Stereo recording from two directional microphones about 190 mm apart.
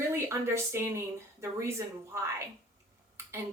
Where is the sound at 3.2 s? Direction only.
15° right (ahead or behind).